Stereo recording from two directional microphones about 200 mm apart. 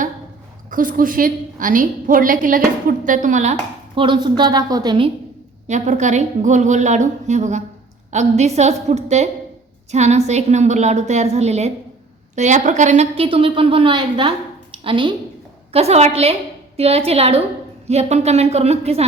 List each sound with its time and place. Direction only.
0.7 s a woman's voice: 45° right (ahead or behind); by 5.1 s 25° right (ahead or behind)
5.6 s a woman's voice: 35° right (ahead or behind)